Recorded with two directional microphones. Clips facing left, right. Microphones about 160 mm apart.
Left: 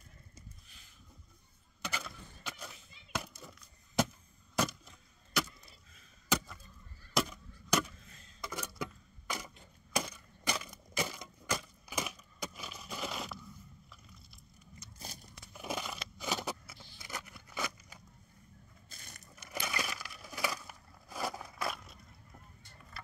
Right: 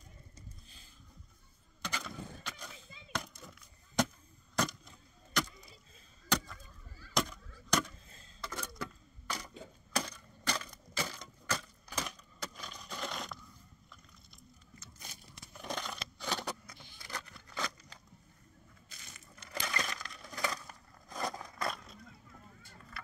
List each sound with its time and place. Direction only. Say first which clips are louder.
1.8 s skateboard: right 1 dB; 5° left (ahead or behind)
6.2 s chop: even; 5° left (ahead or behind)
7.2 s honk: left 1 dB; 5° left (ahead or behind)
8.4 s a sound: left 1 dB; 10° left (ahead or behind)
15.5 s a sound: left 1 dB; 5° left (ahead or behind)
18.9 s crushing: left 2 dB; 50° left (ahead or behind)
19.3 s coin: even; 10° left (ahead or behind)